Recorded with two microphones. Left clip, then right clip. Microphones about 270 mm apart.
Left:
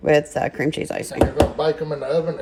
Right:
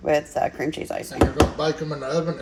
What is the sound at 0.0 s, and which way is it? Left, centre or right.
Speech, left.